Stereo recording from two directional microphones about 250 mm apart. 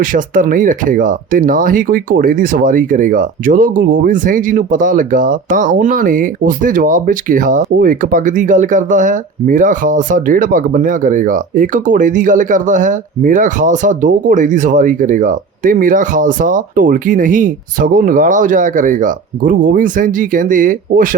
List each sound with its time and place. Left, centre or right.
0.0 s speech: right